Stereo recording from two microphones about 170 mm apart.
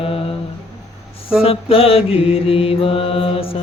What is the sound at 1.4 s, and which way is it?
Mantra, 35° left (ahead or behind).